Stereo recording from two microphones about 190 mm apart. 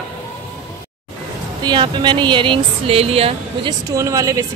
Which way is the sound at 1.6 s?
25° right (ahead or behind).